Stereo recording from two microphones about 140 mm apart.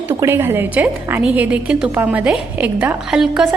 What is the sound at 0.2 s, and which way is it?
A woman's voice, 15° right (ahead or behind).